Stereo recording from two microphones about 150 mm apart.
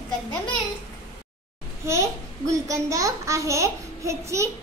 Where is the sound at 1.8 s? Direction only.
20° right (ahead or behind).